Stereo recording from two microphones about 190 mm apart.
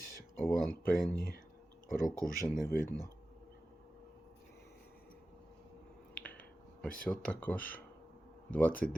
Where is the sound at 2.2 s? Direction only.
45° left (ahead or behind).